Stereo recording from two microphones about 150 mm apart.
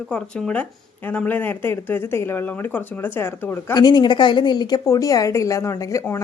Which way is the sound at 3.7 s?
30° left (ahead or behind).